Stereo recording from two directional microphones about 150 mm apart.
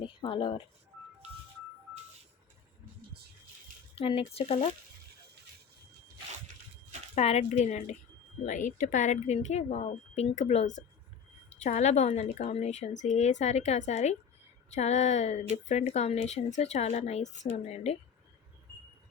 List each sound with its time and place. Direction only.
0.0 s a sound: 35° left (ahead or behind)
4.0 s speech: 40° left (ahead or behind)
7.2 s a woman's voice: 45° left (ahead or behind)